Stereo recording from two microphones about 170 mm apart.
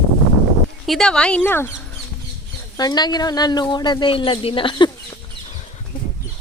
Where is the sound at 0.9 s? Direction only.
Centre (ahead or behind).